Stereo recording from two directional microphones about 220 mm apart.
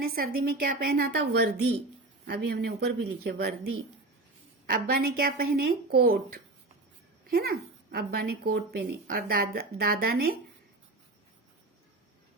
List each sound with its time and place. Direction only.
0.0 s speech: 40° right (ahead or behind)